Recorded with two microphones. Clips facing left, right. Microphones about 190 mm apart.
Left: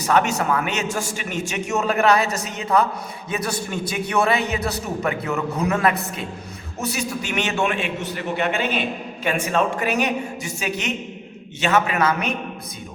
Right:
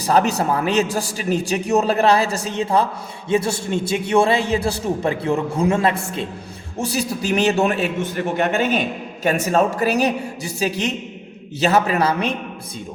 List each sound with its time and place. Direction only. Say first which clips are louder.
0.0 s a man's voice: right 2 dB; 35° right (ahead or behind)